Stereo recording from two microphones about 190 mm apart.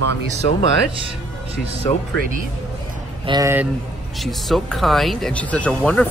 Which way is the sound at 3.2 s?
20° right (ahead or behind).